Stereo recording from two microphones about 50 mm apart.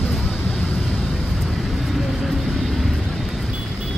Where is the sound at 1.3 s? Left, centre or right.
Centre.